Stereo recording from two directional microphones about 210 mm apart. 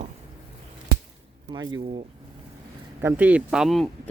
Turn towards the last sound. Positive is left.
turn(degrees=0)  # may be behind; listen again after turning